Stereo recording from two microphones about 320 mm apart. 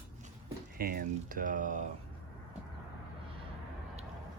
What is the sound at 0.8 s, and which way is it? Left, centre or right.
Speech, right.